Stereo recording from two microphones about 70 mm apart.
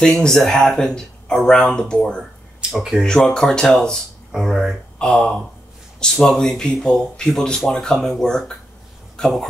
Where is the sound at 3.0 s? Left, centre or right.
Centre.